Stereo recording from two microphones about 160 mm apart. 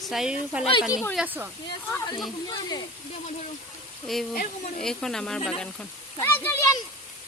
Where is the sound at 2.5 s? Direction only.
25° left (ahead or behind).